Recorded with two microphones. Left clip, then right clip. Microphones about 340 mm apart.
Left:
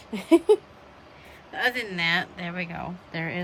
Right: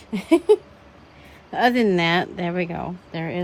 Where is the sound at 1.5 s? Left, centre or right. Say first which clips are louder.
Right 8 dB; centre.